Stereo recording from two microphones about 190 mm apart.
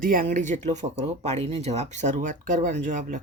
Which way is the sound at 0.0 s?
45° right (ahead or behind).